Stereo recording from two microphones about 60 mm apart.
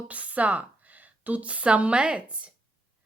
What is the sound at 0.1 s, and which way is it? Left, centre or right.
A woman's voice, right.